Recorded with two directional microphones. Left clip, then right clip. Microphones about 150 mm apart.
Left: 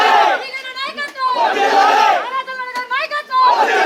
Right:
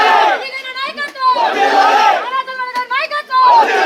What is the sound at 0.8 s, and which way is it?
Children playing, 5° left (ahead or behind).